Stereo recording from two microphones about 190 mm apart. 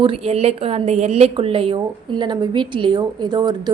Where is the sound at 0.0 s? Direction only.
30° right (ahead or behind).